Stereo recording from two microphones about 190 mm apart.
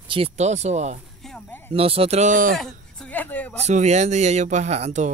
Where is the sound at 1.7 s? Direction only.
30° right (ahead or behind).